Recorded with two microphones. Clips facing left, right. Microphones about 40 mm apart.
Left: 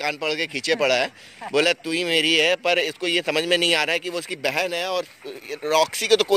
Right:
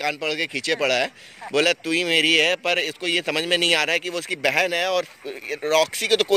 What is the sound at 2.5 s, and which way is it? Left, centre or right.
Speech, right.